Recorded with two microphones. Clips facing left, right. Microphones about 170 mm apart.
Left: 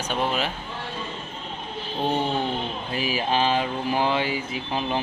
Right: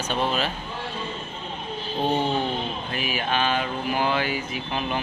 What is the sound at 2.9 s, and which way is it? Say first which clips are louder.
Speech: left 3 dB; 30° left (ahead or behind).